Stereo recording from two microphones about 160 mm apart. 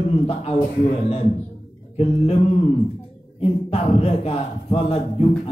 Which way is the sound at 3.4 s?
40° left (ahead or behind).